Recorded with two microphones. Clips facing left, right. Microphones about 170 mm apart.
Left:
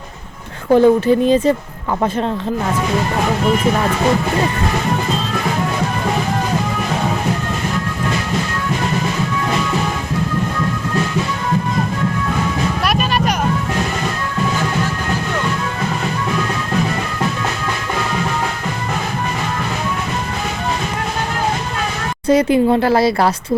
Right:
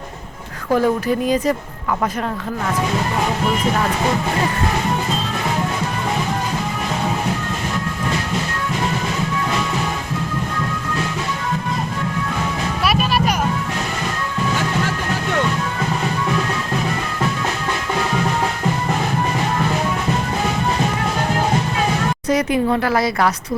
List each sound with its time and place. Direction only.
0.7 s speech: 25° left (ahead or behind)
22.3 s speech: 30° left (ahead or behind)